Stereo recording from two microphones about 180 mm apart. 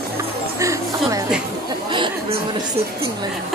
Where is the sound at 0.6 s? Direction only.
15° right (ahead or behind).